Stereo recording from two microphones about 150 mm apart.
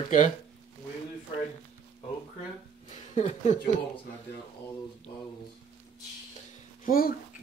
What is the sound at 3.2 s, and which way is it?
Speech, 50° left (ahead or behind).